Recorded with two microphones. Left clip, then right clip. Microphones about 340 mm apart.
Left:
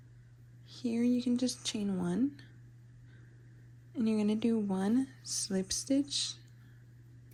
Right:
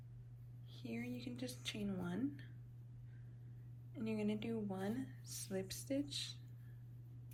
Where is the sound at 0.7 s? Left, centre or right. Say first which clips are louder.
Left 16 dB; centre.